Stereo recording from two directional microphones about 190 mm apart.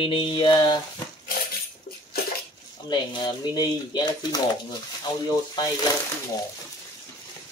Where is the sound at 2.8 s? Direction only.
25° left (ahead or behind).